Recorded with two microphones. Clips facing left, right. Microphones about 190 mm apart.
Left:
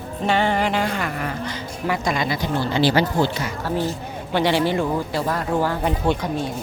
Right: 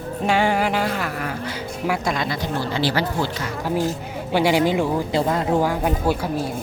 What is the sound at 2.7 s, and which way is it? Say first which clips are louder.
Speech: left 5 dB; 20° left (ahead or behind).